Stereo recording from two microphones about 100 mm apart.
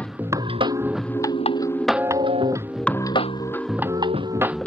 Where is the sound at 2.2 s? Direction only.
55° right (ahead or behind).